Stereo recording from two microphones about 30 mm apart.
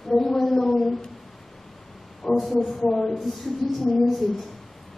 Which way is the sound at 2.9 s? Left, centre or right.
Centre.